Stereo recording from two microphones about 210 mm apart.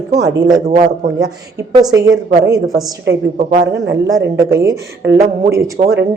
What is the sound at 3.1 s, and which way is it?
Speech, 60° right (ahead or behind).